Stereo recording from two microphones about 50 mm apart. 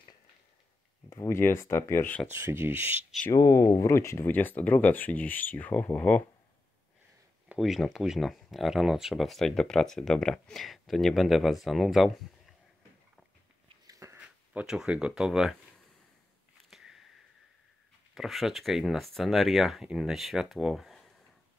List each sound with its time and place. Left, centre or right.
1.1 s speech: left
2.3 s speech: right
3.3 s speech: left
4.3 s speech: left
7.5 s speech: centre
9.6 s speech: centre
14.1 s a sound: right
14.9 s speech: right
15.1 s speech: centre
16.7 s a sound: centre
18.1 s speech: centre
20.7 s a sound: centre